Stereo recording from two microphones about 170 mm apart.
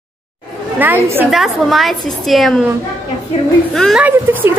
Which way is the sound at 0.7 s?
10° right (ahead or behind).